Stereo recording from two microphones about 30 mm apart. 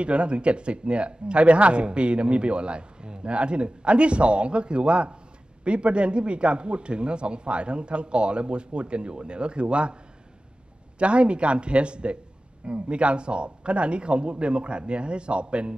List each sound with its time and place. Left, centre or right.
0.0 s speech: right
11.0 s speech: right